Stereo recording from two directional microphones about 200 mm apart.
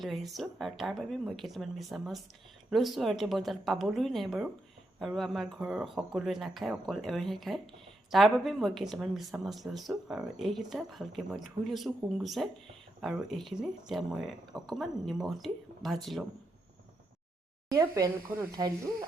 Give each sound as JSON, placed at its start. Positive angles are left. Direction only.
{"t": 0.0, "sound": "a woman's voice", "side_deg": 0}
{"t": 17.7, "sound": "speech", "side_deg": -15}